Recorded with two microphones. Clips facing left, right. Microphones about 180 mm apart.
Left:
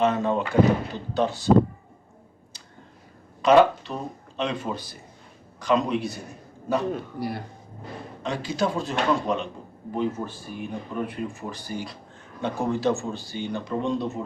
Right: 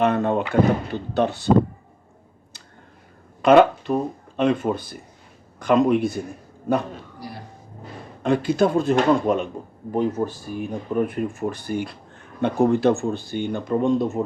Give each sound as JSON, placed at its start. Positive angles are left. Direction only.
{"t": 0.0, "sound": "speech", "side_deg": -60}
{"t": 3.4, "sound": "speech", "side_deg": -55}
{"t": 6.9, "sound": "a man's voice", "side_deg": 60}
{"t": 8.2, "sound": "speech", "side_deg": -55}